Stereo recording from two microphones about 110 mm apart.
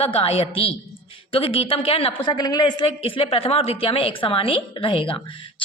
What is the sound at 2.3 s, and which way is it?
A woman's voice, 40° left (ahead or behind).